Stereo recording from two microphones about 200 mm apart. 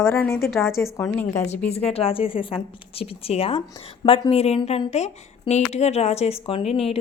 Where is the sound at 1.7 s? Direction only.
30° left (ahead or behind).